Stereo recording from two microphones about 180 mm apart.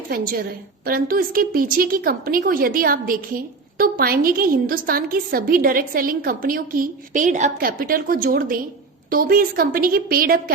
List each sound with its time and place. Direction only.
0.1 s a woman's voice: 55° right (ahead or behind)